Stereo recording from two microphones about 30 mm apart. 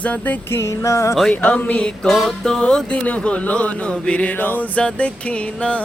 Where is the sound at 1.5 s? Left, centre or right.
Left.